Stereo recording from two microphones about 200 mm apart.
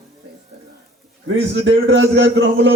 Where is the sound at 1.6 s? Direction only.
65° right (ahead or behind).